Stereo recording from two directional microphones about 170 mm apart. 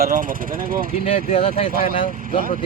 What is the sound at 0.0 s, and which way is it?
Speech, 55° right (ahead or behind).